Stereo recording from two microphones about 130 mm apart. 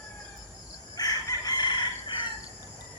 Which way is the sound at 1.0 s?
30° left (ahead or behind).